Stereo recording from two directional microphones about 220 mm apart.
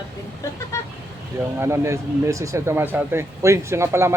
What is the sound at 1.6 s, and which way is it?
Speech, 10° right (ahead or behind).